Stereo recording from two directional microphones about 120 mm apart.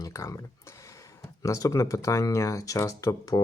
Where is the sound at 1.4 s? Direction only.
25° left (ahead or behind).